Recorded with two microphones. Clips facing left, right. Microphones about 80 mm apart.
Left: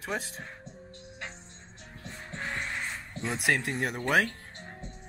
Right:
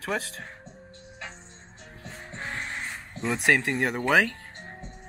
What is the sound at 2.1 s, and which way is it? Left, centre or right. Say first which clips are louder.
Music: even; centre.